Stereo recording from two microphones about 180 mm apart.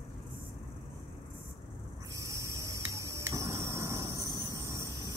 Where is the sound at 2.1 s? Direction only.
15° right (ahead or behind).